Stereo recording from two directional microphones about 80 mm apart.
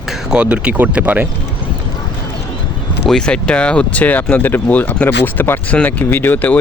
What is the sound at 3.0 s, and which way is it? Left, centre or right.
Speech, centre.